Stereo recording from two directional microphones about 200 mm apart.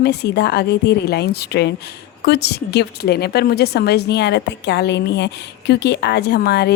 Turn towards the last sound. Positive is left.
turn(degrees=55)  # may be behind; listen again after turning